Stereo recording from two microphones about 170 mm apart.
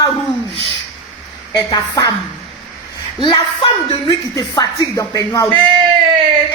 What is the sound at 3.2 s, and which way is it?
Speech, 30° left (ahead or behind).